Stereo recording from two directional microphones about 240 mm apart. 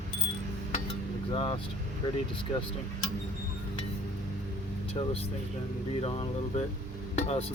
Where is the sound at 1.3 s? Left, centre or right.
Left.